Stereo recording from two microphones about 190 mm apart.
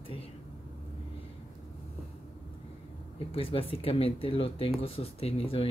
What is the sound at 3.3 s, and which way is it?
Speech, 30° left (ahead or behind).